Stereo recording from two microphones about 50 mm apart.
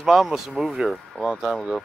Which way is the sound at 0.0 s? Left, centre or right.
Centre.